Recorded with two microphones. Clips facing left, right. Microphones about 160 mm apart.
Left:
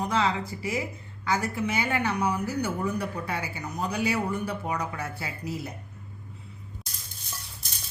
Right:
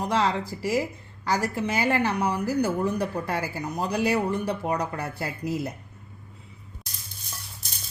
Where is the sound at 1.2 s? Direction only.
35° right (ahead or behind).